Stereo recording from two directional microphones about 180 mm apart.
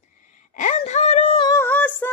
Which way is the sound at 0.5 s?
40° left (ahead or behind).